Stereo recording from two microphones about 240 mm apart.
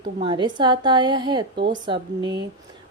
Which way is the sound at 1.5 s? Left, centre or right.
Right.